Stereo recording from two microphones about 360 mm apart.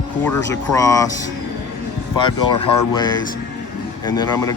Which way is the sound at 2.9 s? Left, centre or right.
Centre.